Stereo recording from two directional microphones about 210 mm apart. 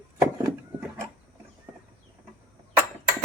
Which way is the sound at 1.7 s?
20° right (ahead or behind).